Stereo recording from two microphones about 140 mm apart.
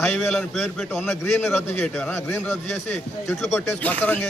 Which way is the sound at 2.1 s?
15° left (ahead or behind).